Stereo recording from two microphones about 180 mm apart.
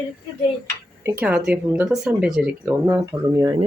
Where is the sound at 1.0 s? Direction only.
10° right (ahead or behind).